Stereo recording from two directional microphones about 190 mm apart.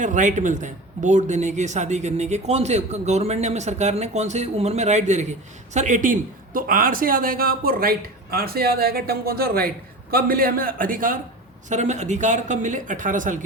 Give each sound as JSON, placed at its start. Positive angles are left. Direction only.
{"t": 0.0, "sound": "speech", "side_deg": -40}